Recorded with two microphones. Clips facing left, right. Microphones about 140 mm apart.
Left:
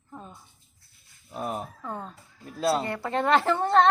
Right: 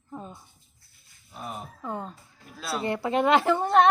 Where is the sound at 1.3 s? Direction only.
45° left (ahead or behind).